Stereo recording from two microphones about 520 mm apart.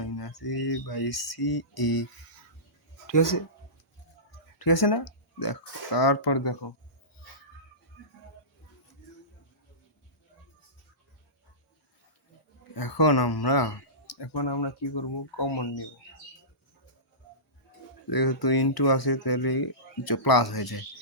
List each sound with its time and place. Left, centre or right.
0.0 s speech: left
3.1 s speech: left
4.5 s speech: left
12.7 s speech: left
18.1 s speech: left